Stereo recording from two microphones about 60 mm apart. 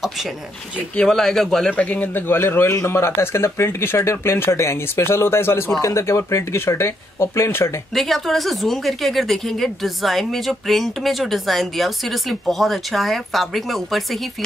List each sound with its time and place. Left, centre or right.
1.0 s a man's voice: centre
1.8 s speech: left
2.2 s speech: left
7.9 s speech: centre